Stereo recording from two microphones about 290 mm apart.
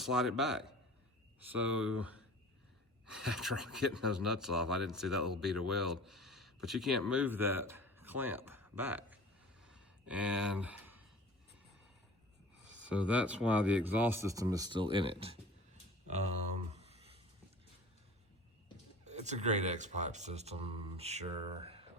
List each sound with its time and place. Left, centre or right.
0.0 s speech: centre
3.2 s speech: centre
9.6 s a sound: centre
12.7 s speech: centre
16.7 s a sound: right
19.0 s speech: right